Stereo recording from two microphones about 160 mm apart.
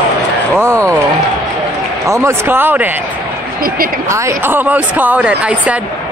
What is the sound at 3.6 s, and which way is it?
Speech, 65° right (ahead or behind).